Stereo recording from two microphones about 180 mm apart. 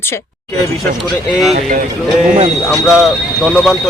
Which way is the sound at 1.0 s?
Centre (ahead or behind).